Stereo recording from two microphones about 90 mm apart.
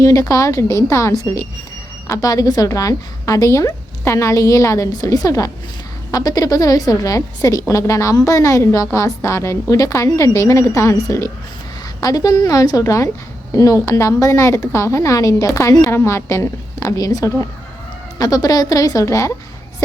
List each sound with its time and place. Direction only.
0.0 s a woman's voice: 40° left (ahead or behind)